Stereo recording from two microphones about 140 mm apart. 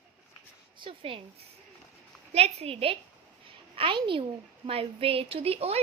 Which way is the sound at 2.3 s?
50° right (ahead or behind).